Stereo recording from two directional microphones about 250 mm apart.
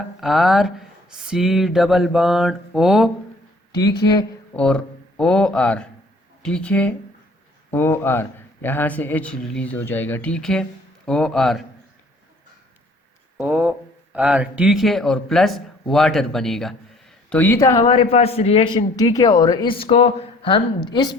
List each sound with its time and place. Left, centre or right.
0.2 s speech: centre
4.5 s a man's voice: centre
13.3 s speech: centre
17.8 s a man's voice: left